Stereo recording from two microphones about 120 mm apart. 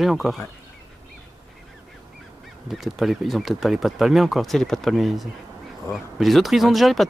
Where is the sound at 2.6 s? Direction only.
Centre (ahead or behind).